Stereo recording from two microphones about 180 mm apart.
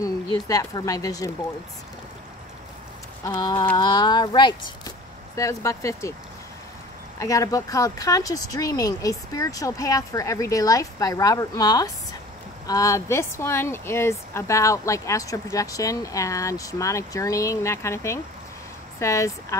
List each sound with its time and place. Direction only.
0.0 s speech: 20° left (ahead or behind)
3.3 s speech: 25° left (ahead or behind)
7.2 s speech: 20° left (ahead or behind)